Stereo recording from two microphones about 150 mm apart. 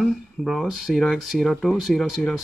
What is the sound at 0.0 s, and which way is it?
Speech, 5° left (ahead or behind).